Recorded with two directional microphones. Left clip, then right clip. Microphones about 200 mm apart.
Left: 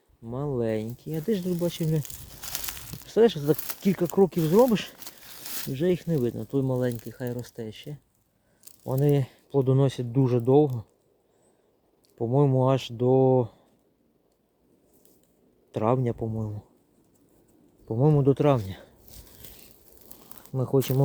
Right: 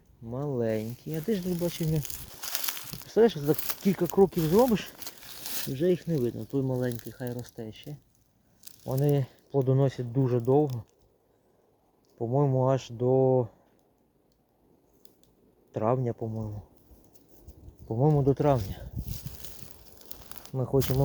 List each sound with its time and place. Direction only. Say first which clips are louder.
0.3 s speech: left 1 dB; 25° left (ahead or behind)
1.8 s a sound: left 3 dB; 35° right (ahead or behind)
3.1 s speech: left 2 dB; 20° left (ahead or behind)
5.4 s a sound: right 1 dB; 15° right (ahead or behind)
5.7 s speech: left 1 dB; 35° left (ahead or behind)
8.8 s speech: left 3 dB; 25° left (ahead or behind)
12.1 s speech: left 3 dB; 35° left (ahead or behind)
15.7 s speech: left 2 dB; 25° left (ahead or behind)
17.8 s speech: left 3 dB; 20° left (ahead or behind)
19.0 s a sound: right 5 dB; 50° right (ahead or behind)
20.5 s speech: left 2 dB; 25° left (ahead or behind)